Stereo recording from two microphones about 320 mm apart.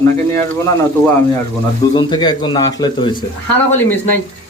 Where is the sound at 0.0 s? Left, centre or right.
Centre.